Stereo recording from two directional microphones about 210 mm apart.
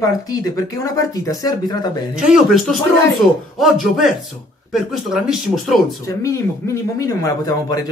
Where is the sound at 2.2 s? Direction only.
Centre (ahead or behind).